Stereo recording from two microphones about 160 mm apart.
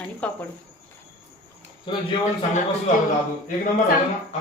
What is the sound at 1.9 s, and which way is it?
Speech, 30° left (ahead or behind).